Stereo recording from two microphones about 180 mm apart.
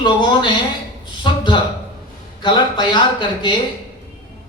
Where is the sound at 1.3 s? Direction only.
25° left (ahead or behind).